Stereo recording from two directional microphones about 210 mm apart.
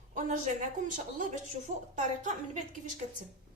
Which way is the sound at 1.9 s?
35° right (ahead or behind).